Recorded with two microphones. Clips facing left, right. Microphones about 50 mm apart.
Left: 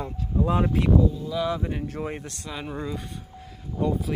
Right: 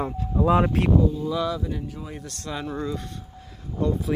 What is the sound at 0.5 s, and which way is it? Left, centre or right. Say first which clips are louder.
Speech: right 5 dB; right.